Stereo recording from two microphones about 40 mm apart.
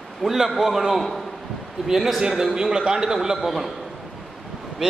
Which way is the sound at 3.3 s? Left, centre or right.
Centre.